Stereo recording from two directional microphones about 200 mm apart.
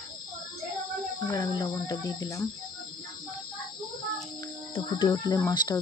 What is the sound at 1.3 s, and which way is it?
Speech, 20° left (ahead or behind).